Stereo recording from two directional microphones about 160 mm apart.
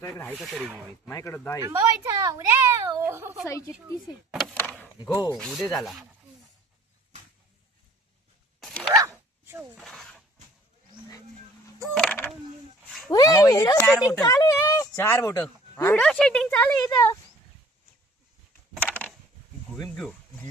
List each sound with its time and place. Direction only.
0.0 s speech: 15° left (ahead or behind)
0.3 s speech: centre (ahead or behind)
1.0 s speech: 15° left (ahead or behind)
1.6 s speech: 20° right (ahead or behind)
4.3 s speech: centre (ahead or behind)
8.6 s dog: 5° left (ahead or behind)
8.9 s zipper: 20° right (ahead or behind)
9.7 s a sound: centre (ahead or behind)
11.9 s a sound: 10° left (ahead or behind)
13.1 s speech: 25° left (ahead or behind)
16.0 s speech: 5° left (ahead or behind)
16.8 s speech: 25° left (ahead or behind)
19.7 s a sound: 5° left (ahead or behind)